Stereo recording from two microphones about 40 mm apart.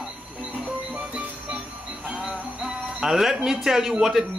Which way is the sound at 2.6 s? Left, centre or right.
Centre.